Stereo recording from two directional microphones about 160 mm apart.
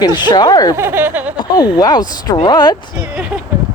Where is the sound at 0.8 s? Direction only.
15° right (ahead or behind).